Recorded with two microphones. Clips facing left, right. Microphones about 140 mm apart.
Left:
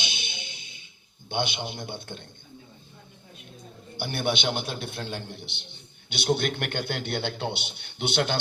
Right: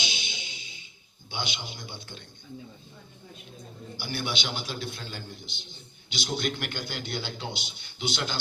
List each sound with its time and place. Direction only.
0.0 s music: 60° left (ahead or behind)
1.3 s a man's voice: 60° left (ahead or behind)
3.9 s a man's voice: 60° left (ahead or behind)